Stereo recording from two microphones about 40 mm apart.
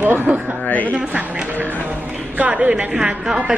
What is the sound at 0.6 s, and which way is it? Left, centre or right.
Speech, left.